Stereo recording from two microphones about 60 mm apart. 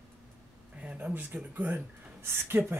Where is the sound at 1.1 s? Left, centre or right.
Right.